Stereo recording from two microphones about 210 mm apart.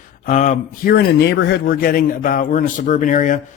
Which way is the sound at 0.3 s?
35° left (ahead or behind).